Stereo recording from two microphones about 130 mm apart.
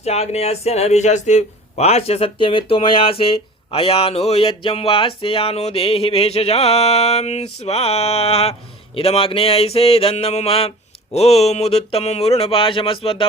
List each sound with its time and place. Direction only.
0.0 s a man's voice: 55° left (ahead or behind)